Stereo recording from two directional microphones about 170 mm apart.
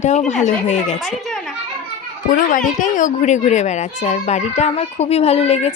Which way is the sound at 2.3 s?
50° left (ahead or behind).